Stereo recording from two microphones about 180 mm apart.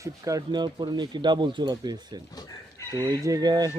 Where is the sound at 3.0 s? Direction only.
20° right (ahead or behind).